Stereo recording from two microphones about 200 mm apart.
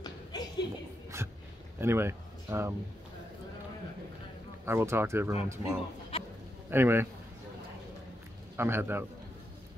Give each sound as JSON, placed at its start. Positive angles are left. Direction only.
{"t": 0.0, "sound": "a sound", "side_deg": 20}
{"t": 1.8, "sound": "speech", "side_deg": -10}
{"t": 4.6, "sound": "speech", "side_deg": -10}
{"t": 6.1, "sound": "a sound", "side_deg": 25}
{"t": 6.7, "sound": "speech", "side_deg": -10}
{"t": 8.5, "sound": "speech", "side_deg": -10}